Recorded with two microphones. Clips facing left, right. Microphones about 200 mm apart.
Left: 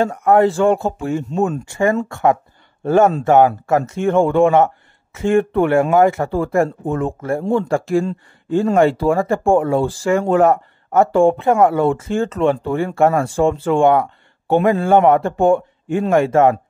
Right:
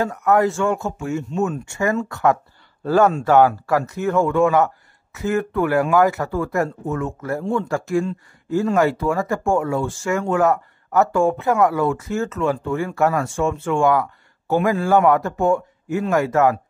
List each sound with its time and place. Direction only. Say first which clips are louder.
0.0 s speech: left 4 dB; 30° left (ahead or behind)